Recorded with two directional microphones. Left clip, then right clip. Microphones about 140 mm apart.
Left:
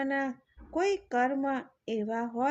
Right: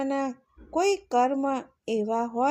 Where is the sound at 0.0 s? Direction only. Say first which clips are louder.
Right 3 dB; 40° right (ahead or behind).